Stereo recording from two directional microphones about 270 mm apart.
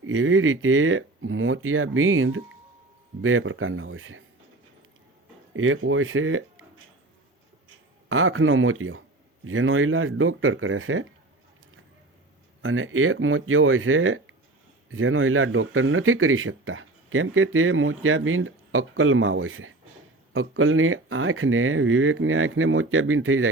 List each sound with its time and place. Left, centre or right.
0.0 s speech: right
5.5 s speech: right
8.1 s speech: right
12.6 s speech: right